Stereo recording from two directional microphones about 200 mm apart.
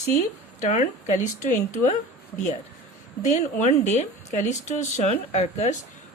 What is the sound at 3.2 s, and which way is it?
Speech, 35° left (ahead or behind).